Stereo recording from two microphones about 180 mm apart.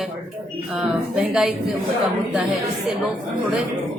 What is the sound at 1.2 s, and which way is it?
Speech, 5° right (ahead or behind).